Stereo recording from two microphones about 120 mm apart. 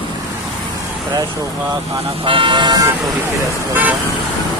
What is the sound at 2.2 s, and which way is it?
Speech, 45° right (ahead or behind).